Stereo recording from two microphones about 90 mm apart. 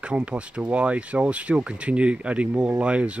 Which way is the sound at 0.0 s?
15° right (ahead or behind).